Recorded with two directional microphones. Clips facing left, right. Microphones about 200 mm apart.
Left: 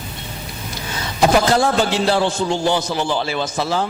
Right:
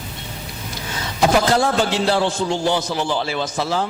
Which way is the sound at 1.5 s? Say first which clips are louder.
Left 1 dB; 10° left (ahead or behind).